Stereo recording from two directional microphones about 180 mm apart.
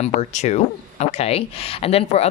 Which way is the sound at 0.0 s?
40° left (ahead or behind).